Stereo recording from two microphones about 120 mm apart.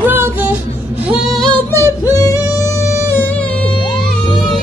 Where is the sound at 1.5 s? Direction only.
20° left (ahead or behind).